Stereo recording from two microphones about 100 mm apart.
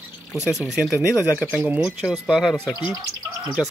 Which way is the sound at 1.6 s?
15° right (ahead or behind).